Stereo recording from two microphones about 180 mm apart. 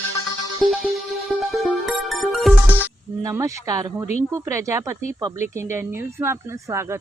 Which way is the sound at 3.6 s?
20° right (ahead or behind).